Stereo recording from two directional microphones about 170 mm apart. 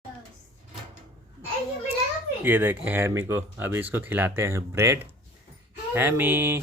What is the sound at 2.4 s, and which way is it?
Speech, 10° right (ahead or behind).